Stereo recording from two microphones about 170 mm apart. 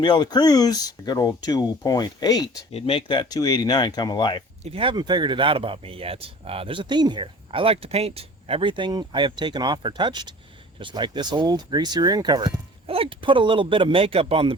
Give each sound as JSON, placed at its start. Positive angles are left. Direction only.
{"t": 0.0, "sound": "speech", "side_deg": 25}
{"t": 2.7, "sound": "speech", "side_deg": 35}
{"t": 4.6, "sound": "speech", "side_deg": -35}